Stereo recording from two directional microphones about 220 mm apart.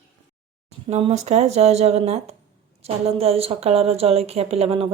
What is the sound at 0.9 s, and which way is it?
A woman's voice, 30° right (ahead or behind).